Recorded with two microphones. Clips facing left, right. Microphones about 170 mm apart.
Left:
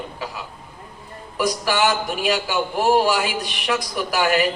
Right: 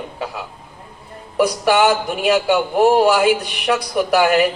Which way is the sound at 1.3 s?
65° right (ahead or behind).